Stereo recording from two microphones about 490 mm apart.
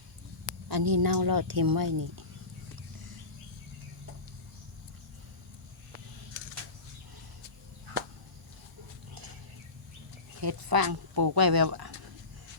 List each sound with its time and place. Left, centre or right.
0.7 s speech: right
10.4 s speech: right